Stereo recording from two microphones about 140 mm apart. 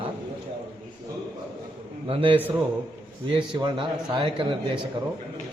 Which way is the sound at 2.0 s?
40° right (ahead or behind).